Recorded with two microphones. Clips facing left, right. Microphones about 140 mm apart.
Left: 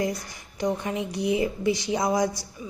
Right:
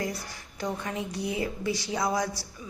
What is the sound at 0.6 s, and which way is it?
A woman's voice, 20° left (ahead or behind).